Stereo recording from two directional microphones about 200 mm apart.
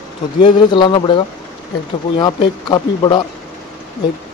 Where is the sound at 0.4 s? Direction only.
25° left (ahead or behind).